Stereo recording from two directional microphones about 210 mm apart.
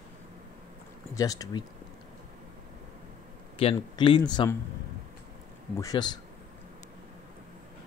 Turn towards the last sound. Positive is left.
turn(degrees=20)  # may be behind; listen again after turning